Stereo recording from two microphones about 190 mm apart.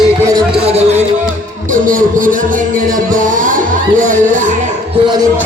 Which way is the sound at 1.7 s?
45° right (ahead or behind).